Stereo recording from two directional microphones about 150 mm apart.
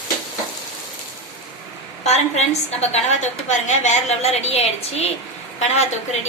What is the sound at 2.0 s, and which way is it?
A woman's voice, 45° left (ahead or behind).